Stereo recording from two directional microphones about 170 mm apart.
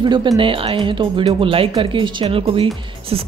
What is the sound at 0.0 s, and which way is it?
Speech, 30° right (ahead or behind).